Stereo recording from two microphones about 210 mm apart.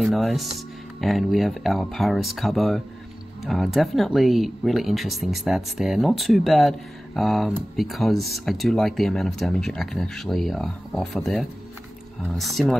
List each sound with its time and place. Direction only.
0.0 s speech: centre (ahead or behind)